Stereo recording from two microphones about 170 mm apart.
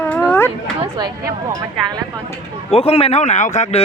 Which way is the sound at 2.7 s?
35° left (ahead or behind).